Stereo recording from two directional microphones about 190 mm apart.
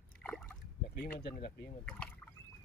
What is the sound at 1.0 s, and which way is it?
Speech, 60° left (ahead or behind).